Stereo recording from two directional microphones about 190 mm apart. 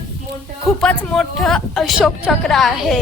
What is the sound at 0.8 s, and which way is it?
A woman's voice, 5° left (ahead or behind).